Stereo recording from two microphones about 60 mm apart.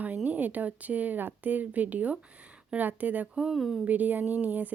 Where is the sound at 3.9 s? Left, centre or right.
Right.